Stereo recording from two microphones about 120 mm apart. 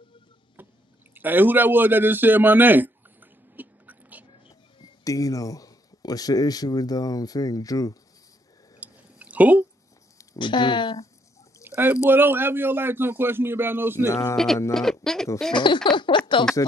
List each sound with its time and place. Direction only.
0.6 s drip: 15° right (ahead or behind)
1.1 s a sound: 15° right (ahead or behind)
4.7 s speech: 30° left (ahead or behind)
8.7 s drip: 10° right (ahead or behind)
10.4 s speech: 40° left (ahead or behind)
11.6 s bird: 20° right (ahead or behind)
12.1 s a man's voice: 15° right (ahead or behind)
14.0 s speech: 25° left (ahead or behind)
14.3 s speech: 5° left (ahead or behind)
15.5 s speech: 40° left (ahead or behind)